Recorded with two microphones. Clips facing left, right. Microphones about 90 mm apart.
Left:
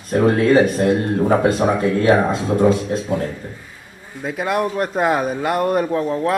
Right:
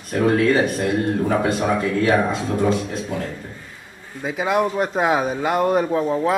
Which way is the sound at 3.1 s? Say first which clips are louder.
Left 6 dB; 20° left (ahead or behind).